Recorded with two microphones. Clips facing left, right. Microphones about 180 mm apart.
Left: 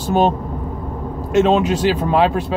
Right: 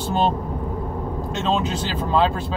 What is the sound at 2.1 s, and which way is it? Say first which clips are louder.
Speech: left 1 dB; 65° left (ahead or behind).